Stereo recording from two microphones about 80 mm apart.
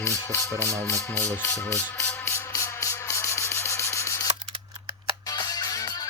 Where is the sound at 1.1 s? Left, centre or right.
Left.